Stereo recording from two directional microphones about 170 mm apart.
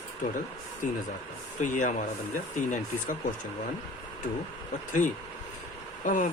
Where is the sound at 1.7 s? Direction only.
45° left (ahead or behind).